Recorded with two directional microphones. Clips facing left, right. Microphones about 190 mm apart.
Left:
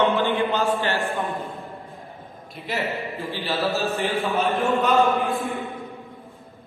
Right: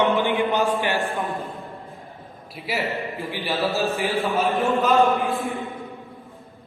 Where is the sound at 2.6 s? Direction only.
10° right (ahead or behind).